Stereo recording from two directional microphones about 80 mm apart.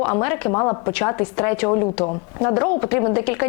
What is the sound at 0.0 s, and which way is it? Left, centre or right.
A woman's voice, left.